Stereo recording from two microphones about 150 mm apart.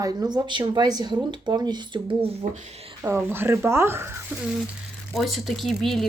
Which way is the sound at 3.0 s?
15° right (ahead or behind).